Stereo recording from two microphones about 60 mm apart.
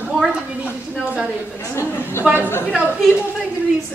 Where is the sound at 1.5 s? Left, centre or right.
Left.